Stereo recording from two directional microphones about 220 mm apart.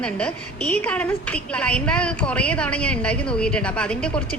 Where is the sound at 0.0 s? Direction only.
5° left (ahead or behind).